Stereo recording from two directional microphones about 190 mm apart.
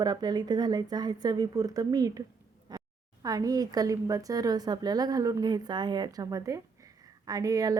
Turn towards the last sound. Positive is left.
turn(degrees=-20)  # may be behind; listen again after turning